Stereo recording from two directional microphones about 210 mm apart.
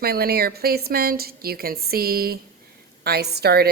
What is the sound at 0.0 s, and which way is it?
A woman's voice, 45° right (ahead or behind).